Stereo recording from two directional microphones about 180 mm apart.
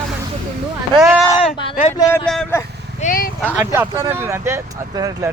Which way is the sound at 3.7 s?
15° right (ahead or behind).